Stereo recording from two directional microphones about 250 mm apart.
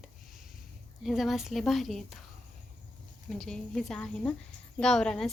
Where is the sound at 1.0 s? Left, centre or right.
Centre.